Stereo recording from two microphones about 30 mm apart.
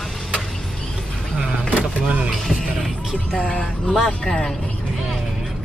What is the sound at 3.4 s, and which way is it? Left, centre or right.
Speech, centre.